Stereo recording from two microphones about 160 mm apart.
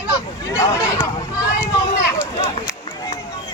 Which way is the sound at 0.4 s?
15° left (ahead or behind).